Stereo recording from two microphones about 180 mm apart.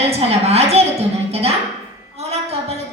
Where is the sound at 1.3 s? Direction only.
35° right (ahead or behind).